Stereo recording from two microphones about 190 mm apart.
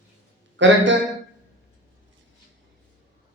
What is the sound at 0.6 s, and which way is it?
Speech, 75° right (ahead or behind).